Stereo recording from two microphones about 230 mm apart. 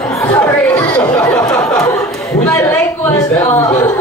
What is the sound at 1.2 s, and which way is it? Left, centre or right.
Speech, centre.